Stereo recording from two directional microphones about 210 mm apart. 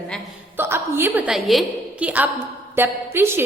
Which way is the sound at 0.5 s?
10° right (ahead or behind).